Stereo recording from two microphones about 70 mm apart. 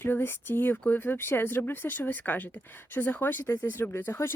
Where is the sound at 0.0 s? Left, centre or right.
Left.